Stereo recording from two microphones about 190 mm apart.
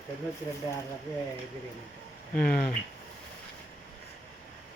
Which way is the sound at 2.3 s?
50° left (ahead or behind).